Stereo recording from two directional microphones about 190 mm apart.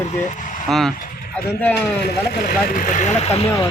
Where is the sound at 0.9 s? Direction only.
50° left (ahead or behind).